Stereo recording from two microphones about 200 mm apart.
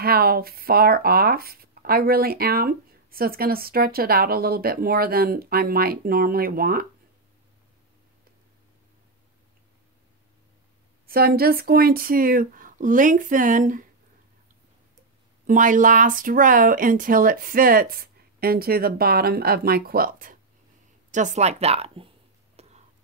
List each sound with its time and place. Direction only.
0.0 s speech: 50° right (ahead or behind)
11.1 s speech: 50° right (ahead or behind)
15.4 s speech: 40° right (ahead or behind)
22.6 s a sound: 30° right (ahead or behind)